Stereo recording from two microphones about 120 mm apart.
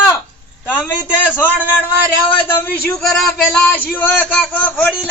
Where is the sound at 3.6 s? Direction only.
15° left (ahead or behind).